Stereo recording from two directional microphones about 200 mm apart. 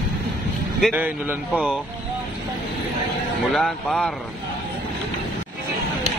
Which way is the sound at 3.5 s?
5° left (ahead or behind).